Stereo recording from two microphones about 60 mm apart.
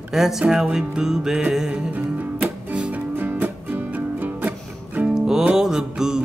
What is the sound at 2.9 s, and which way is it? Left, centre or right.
Music, right.